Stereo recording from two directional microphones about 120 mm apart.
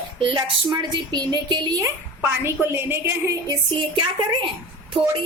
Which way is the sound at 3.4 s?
40° right (ahead or behind).